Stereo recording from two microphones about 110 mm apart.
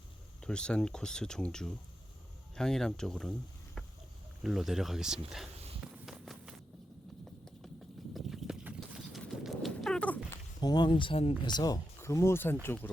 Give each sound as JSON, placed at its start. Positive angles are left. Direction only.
{"t": 0.4, "sound": "speech", "side_deg": 10}
{"t": 4.4, "sound": "speech", "side_deg": 0}
{"t": 6.1, "sound": "run", "side_deg": -5}
{"t": 8.1, "sound": "a sound", "side_deg": 0}
{"t": 9.0, "sound": "clip-clop", "side_deg": 0}
{"t": 10.6, "sound": "speech", "side_deg": 40}
{"t": 11.9, "sound": "speech", "side_deg": 25}